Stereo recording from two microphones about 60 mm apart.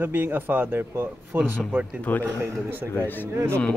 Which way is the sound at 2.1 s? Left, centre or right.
Left.